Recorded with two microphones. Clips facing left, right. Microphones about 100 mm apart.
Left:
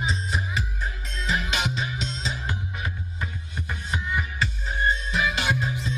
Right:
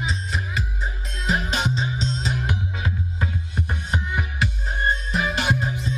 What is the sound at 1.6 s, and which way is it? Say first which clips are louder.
Music: right 4 dB; 30° right (ahead or behind).